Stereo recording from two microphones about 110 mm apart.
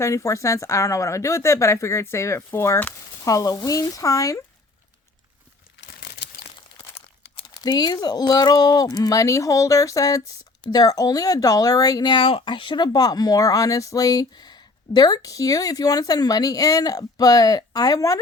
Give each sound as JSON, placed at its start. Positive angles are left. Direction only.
{"t": 0.0, "sound": "speech", "side_deg": 30}
{"t": 6.7, "sound": "crumpling", "side_deg": 60}
{"t": 7.6, "sound": "speech", "side_deg": 40}